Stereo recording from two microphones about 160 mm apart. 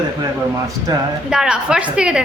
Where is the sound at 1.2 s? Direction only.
5° right (ahead or behind).